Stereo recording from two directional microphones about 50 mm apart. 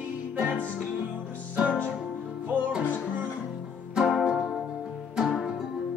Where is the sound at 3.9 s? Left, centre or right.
Centre.